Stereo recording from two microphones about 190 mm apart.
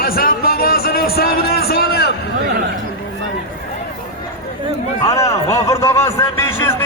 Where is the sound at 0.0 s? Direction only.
50° left (ahead or behind).